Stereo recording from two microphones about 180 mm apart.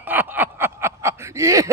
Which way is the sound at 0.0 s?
10° right (ahead or behind).